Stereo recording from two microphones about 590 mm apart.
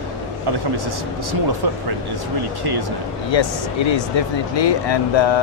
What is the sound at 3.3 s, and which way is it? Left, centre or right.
Speech, left.